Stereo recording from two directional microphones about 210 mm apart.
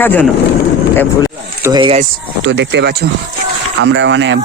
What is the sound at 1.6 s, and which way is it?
Speech, 20° right (ahead or behind).